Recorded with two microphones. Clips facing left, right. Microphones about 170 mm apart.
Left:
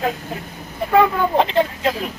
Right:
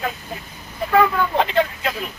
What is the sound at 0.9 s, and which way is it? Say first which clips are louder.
Speech: left 2 dB; 25° left (ahead or behind).